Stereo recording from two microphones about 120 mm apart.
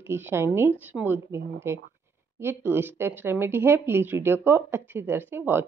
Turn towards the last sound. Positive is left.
turn(degrees=-20)  # may be behind; listen again after turning